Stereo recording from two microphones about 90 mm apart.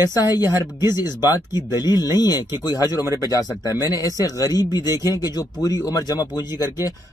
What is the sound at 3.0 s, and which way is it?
Speech, 40° right (ahead or behind).